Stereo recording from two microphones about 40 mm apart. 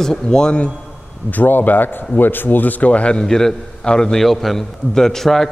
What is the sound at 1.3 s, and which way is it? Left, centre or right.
A man's voice, left.